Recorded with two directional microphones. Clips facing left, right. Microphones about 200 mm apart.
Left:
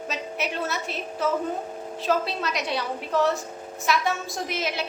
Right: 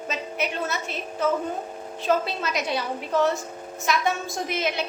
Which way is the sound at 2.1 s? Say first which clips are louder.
Right 1 dB; centre (ahead or behind).